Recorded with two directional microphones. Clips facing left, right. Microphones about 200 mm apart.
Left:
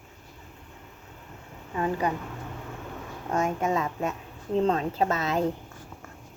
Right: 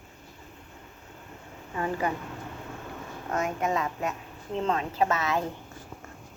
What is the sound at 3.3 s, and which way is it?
A woman's voice, 25° left (ahead or behind).